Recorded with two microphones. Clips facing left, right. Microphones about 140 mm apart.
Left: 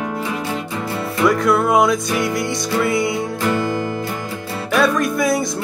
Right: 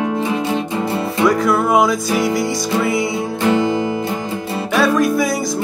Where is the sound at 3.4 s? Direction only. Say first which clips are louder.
Right 6 dB; 20° right (ahead or behind).